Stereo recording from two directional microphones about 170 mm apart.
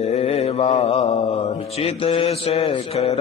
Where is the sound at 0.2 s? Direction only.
35° left (ahead or behind).